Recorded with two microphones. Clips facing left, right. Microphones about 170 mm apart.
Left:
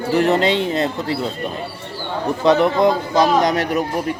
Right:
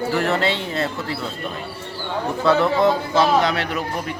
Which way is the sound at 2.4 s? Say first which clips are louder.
Left 2 dB; 15° left (ahead or behind).